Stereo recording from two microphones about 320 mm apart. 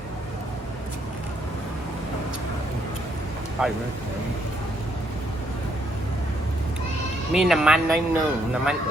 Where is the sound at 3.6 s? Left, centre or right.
Centre.